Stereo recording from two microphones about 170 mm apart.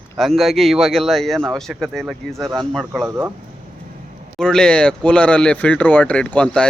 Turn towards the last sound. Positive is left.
turn(degrees=5)  # may be behind; listen again after turning